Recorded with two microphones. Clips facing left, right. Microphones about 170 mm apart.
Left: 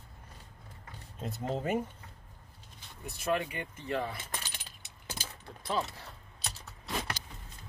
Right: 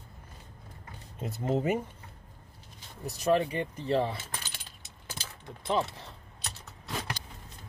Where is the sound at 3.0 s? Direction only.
35° right (ahead or behind).